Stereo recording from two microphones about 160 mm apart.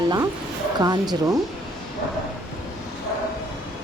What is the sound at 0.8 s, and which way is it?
Speech, 25° right (ahead or behind).